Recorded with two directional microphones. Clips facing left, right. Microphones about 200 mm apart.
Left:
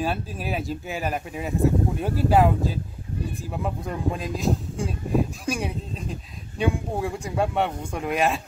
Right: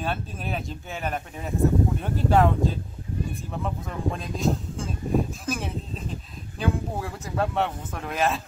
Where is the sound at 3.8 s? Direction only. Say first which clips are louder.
Left 2 dB; centre (ahead or behind).